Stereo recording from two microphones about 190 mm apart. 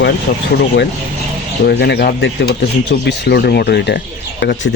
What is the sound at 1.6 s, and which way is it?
Speech, 60° left (ahead or behind).